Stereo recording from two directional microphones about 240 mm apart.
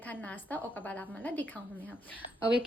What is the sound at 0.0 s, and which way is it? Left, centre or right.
A woman's voice, centre.